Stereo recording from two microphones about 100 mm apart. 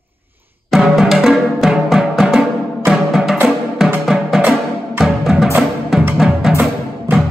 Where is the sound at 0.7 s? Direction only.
Centre (ahead or behind).